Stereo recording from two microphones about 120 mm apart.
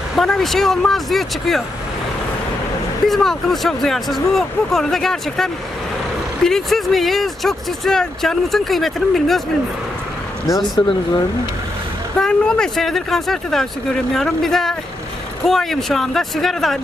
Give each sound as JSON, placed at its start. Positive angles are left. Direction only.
{"t": 0.1, "sound": "speech", "side_deg": 5}
{"t": 3.1, "sound": "speech", "side_deg": 0}
{"t": 10.8, "sound": "speech", "side_deg": 35}
{"t": 12.2, "sound": "speech", "side_deg": 5}